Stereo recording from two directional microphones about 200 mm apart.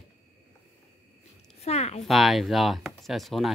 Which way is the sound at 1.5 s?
30° left (ahead or behind).